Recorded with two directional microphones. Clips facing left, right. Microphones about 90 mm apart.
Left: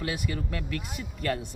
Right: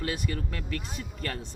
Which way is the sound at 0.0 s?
5° left (ahead or behind).